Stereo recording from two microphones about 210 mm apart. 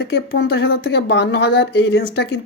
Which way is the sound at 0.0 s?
60° left (ahead or behind).